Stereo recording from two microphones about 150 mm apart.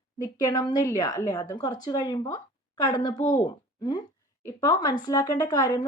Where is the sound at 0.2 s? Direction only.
25° left (ahead or behind).